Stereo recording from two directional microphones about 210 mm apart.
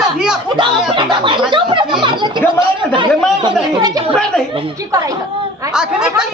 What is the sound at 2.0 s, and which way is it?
Music, 20° right (ahead or behind).